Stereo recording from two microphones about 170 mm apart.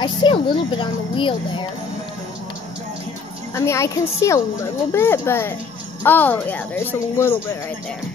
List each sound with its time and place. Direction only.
0.0 s a woman's voice: 30° left (ahead or behind)
3.5 s speech: 15° left (ahead or behind)